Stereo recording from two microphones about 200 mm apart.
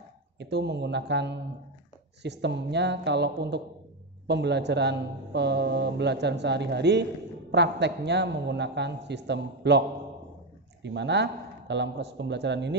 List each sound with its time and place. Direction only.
0.4 s a man's voice: 55° right (ahead or behind)